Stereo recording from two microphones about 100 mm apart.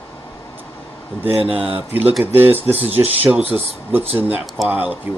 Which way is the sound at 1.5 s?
15° right (ahead or behind).